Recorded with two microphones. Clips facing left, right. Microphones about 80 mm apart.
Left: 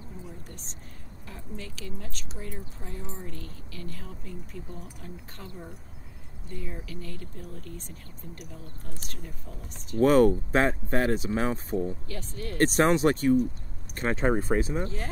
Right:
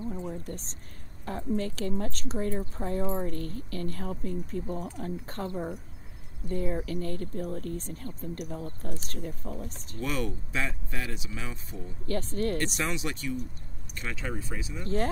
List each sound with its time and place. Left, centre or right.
0.2 s a sound: right
1.2 s speech: right
9.9 s speech: left
12.1 s speech: right
12.5 s speech: left